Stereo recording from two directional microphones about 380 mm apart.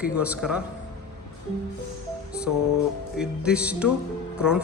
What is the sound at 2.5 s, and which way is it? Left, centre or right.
Speech, left.